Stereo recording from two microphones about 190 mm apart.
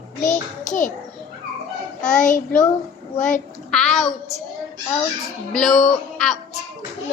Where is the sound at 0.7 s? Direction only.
45° left (ahead or behind).